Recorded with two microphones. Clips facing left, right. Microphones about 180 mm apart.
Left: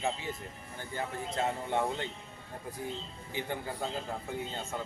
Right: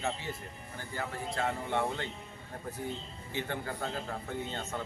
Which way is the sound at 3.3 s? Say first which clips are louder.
Even; 15° left (ahead or behind).